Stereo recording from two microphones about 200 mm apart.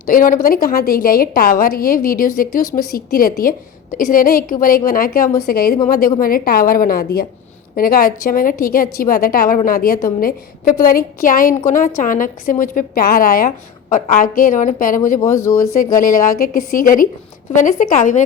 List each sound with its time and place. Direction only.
0.1 s a woman's voice: 45° left (ahead or behind)